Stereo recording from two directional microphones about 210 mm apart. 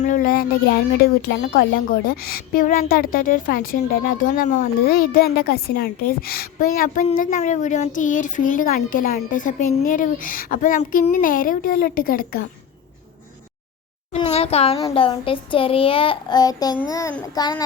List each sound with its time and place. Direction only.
0.0 s a woman's voice: 40° left (ahead or behind)
4.4 s speech: 35° left (ahead or behind)
14.1 s a child's voice: 30° left (ahead or behind)
16.9 s child singing: 15° left (ahead or behind)